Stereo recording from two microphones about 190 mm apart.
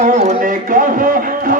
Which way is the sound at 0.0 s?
35° right (ahead or behind).